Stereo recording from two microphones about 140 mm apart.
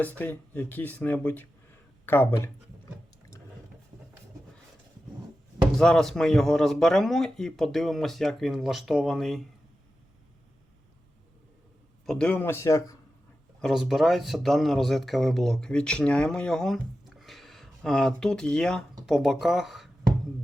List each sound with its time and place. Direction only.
0.0 s speech: 10° left (ahead or behind)
5.7 s a man's voice: 5° left (ahead or behind)
12.0 s speech: 5° left (ahead or behind); by 13.0 s 20° left (ahead or behind)
13.6 s a man's voice: centre (ahead or behind)
16.7 s a sound: centre (ahead or behind)
19.0 s a man's voice: 5° right (ahead or behind)